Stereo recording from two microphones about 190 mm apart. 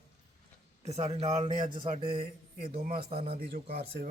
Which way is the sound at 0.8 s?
35° right (ahead or behind).